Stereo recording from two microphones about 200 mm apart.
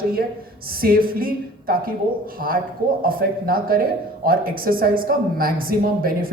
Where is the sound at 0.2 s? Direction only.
50° right (ahead or behind).